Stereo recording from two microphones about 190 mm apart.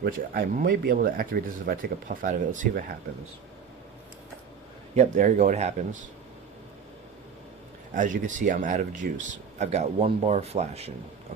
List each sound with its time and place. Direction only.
0.0 s speech: 50° right (ahead or behind)
4.9 s speech: 40° right (ahead or behind)
7.9 s speech: 45° right (ahead or behind)